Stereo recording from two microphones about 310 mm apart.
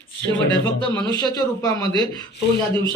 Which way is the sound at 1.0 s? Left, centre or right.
Centre.